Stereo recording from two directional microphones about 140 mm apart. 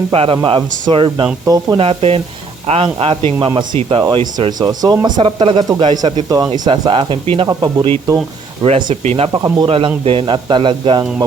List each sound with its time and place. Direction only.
0.1 s speech: 40° right (ahead or behind)
3.8 s speech: 45° right (ahead or behind)
4.1 s speech: 35° right (ahead or behind)
8.6 s speech: 45° right (ahead or behind)